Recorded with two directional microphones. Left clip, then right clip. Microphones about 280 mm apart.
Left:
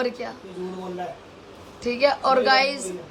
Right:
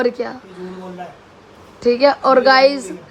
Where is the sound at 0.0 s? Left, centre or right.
Centre.